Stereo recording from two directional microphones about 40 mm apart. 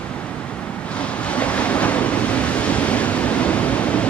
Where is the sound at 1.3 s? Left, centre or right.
Left.